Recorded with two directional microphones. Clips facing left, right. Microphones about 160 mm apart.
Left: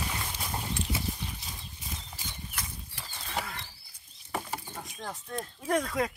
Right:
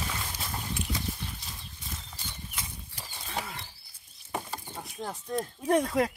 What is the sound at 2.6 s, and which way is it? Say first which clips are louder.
Horse: even; 15° right (ahead or behind).